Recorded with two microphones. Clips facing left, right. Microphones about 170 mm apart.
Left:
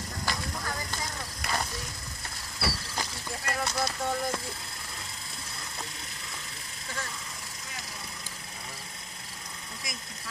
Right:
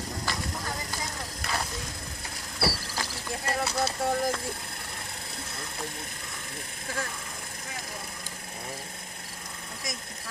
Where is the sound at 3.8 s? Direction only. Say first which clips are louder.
Right 4 dB; 35° right (ahead or behind).